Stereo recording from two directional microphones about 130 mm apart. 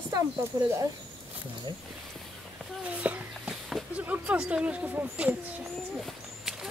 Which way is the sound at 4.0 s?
10° right (ahead or behind).